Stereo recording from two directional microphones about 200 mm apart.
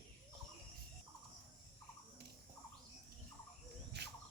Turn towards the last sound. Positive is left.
turn(degrees=-55)  # may be behind; listen again after turning